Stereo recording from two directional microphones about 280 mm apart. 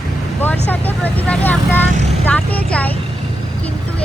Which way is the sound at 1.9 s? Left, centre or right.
Right.